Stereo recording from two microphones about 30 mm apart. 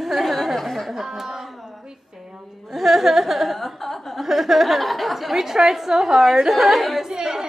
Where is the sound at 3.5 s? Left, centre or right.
Centre.